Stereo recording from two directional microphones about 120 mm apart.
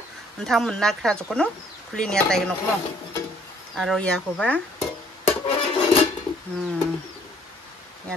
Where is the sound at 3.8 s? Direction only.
5° left (ahead or behind).